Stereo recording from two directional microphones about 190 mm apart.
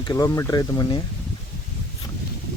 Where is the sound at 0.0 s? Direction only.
20° left (ahead or behind).